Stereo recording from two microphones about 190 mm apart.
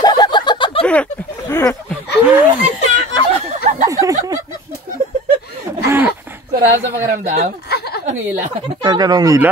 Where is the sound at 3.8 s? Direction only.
15° right (ahead or behind).